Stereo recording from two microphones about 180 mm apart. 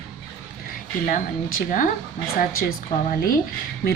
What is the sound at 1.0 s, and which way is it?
Speech, 50° left (ahead or behind).